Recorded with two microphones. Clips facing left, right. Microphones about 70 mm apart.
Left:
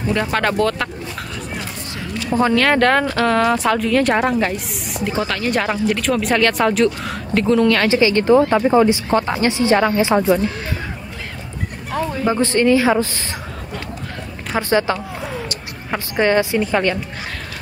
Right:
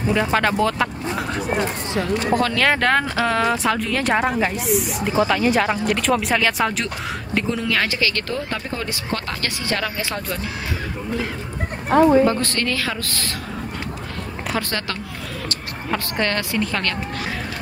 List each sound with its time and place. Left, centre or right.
0.0 s speech: centre
2.5 s speech: centre
7.9 s speech: left
11.9 s speech: right
12.3 s speech: centre
14.5 s a woman's voice: left